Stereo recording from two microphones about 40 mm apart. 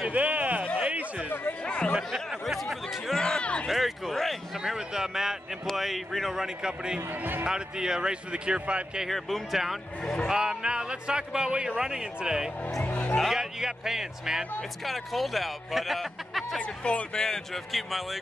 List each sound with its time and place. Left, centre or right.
0.0 s a sound: right
1.6 s speech: left
2.0 s speech: centre
3.2 s speech: centre
3.6 s speech: centre
4.6 s speech: centre
6.4 s a man's voice: centre
9.5 s speech: centre
10.3 s a man's voice: centre
12.8 s speech: left
13.3 s speech: centre
14.9 s speech: centre
16.6 s speech: left
17.6 s speech: centre